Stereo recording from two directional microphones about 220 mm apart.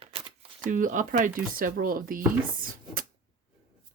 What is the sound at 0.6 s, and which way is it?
Speech, 35° right (ahead or behind).